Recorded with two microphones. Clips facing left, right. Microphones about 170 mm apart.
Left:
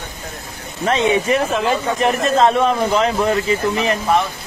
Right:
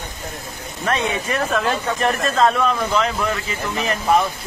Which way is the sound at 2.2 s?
25° left (ahead or behind).